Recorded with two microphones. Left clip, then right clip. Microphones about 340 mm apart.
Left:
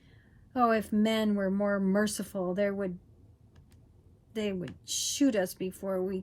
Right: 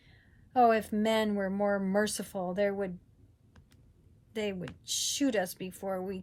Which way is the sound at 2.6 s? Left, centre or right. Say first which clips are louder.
Even; right.